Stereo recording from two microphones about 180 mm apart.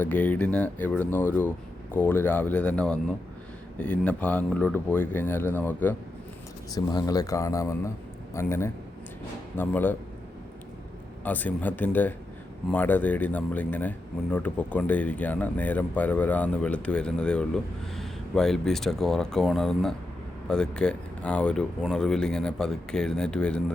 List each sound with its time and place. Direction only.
0.0 s speech: 10° left (ahead or behind)
6.7 s speech: 20° left (ahead or behind)
11.2 s speech: 10° left (ahead or behind)